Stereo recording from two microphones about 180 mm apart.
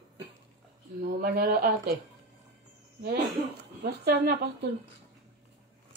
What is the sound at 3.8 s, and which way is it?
Speech, 65° right (ahead or behind).